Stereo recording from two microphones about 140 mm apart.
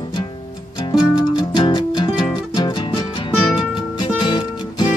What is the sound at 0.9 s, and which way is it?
Music, 30° left (ahead or behind).